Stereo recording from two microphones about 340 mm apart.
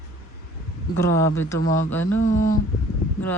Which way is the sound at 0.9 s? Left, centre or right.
Centre.